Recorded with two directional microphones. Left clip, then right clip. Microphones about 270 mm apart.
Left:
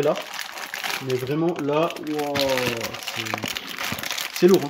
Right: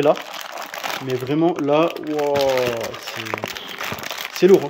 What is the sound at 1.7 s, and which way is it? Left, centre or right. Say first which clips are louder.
Speech: right 5 dB; centre.